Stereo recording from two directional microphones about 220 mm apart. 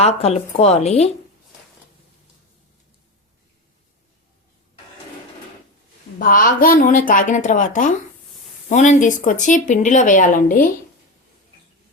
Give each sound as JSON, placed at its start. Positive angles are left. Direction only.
{"t": 0.0, "sound": "a woman's voice", "side_deg": 30}
{"t": 6.1, "sound": "speech", "side_deg": 40}